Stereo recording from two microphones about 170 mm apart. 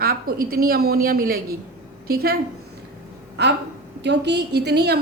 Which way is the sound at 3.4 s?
80° right.